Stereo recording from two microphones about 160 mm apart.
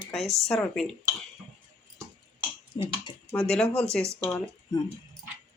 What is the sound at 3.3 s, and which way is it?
Speech, 10° left (ahead or behind).